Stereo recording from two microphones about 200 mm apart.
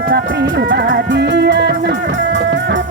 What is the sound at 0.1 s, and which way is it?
Music, 55° right (ahead or behind).